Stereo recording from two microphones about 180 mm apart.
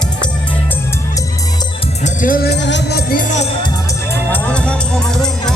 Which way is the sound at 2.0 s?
50° left (ahead or behind).